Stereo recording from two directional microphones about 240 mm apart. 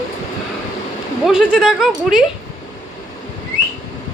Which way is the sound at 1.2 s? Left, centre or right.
Centre.